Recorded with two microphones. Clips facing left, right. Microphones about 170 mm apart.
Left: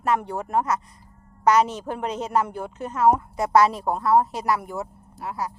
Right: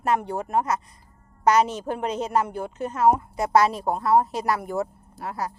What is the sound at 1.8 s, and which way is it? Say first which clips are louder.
Speech: right 1 dB; 25° right (ahead or behind).